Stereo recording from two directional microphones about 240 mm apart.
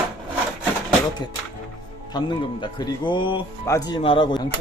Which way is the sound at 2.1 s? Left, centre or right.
Centre.